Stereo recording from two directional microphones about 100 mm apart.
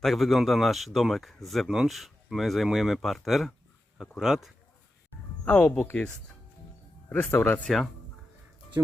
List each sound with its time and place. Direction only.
0.0 s speech: centre (ahead or behind)
5.5 s speech: 15° left (ahead or behind)
7.1 s speech: 15° left (ahead or behind)